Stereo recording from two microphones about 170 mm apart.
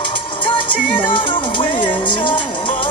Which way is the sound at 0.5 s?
30° left (ahead or behind).